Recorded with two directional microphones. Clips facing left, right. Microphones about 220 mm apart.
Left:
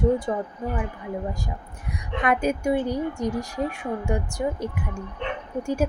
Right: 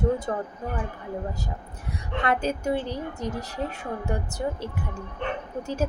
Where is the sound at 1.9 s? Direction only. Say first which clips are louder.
Left 2 dB; 15° left (ahead or behind).